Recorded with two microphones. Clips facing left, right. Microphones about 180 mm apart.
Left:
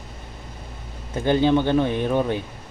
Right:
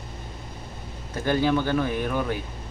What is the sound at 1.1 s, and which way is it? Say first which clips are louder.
Speech: left 4 dB; 20° left (ahead or behind).